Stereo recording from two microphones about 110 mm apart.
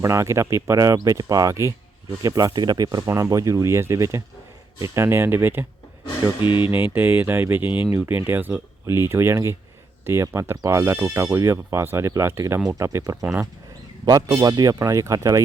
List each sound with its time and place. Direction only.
0.0 s speech: 25° right (ahead or behind)
6.4 s a sound: 50° left (ahead or behind)
6.7 s speech: 20° right (ahead or behind)
13.2 s speech: 15° right (ahead or behind)
14.0 s speech: 40° right (ahead or behind)